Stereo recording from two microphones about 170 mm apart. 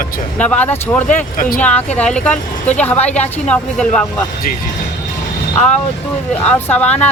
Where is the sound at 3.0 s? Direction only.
40° left (ahead or behind).